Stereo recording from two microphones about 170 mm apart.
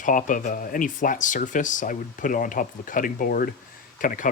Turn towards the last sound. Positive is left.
turn(degrees=55)  # may be behind; listen again after turning